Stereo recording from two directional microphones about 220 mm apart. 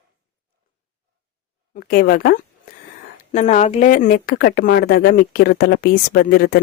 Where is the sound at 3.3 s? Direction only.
35° left (ahead or behind).